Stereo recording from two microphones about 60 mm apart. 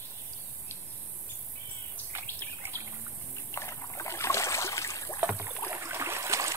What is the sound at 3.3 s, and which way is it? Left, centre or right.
Rowboat, left.